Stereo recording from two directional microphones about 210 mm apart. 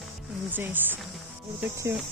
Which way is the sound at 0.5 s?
10° right (ahead or behind).